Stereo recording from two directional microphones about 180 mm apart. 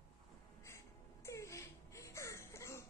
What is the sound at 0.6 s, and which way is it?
Music, 15° left (ahead or behind).